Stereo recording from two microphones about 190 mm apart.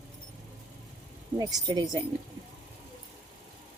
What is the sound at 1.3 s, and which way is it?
Speech, 20° right (ahead or behind).